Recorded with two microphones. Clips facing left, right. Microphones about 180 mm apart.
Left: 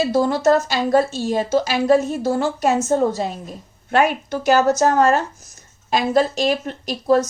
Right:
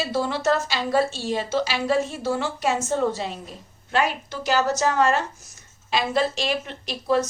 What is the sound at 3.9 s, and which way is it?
A woman's voice, 55° left (ahead or behind).